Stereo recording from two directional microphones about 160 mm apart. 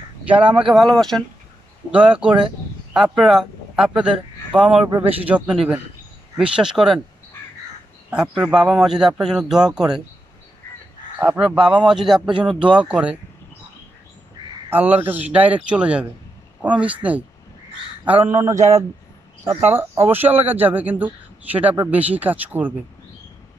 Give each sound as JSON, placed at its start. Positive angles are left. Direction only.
{"t": 0.6, "sound": "a man's voice", "side_deg": -5}
{"t": 8.1, "sound": "a man's voice", "side_deg": -5}
{"t": 11.1, "sound": "a man's voice", "side_deg": -10}
{"t": 14.7, "sound": "speech", "side_deg": -10}